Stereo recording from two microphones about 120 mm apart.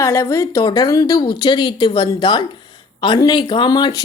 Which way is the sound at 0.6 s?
35° left (ahead or behind).